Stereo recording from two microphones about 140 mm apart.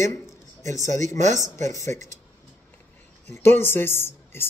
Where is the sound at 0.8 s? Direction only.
60° right (ahead or behind).